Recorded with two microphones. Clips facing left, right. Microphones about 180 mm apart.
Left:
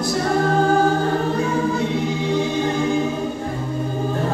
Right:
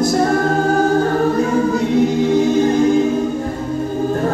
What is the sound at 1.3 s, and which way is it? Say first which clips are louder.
Choir: right 4 dB; 40° right (ahead or behind).